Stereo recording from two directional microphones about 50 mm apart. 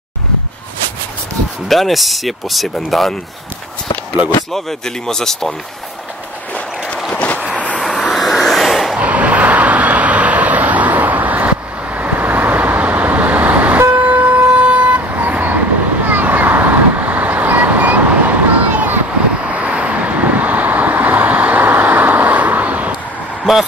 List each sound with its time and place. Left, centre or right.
1.7 s speech: centre
4.5 s speech: centre
8.1 s a sound: centre
8.9 s vehicle: right